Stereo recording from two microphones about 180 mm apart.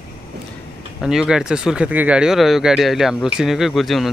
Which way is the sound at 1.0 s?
5° right (ahead or behind).